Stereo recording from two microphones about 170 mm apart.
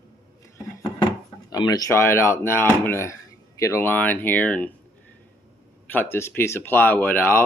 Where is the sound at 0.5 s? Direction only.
20° left (ahead or behind).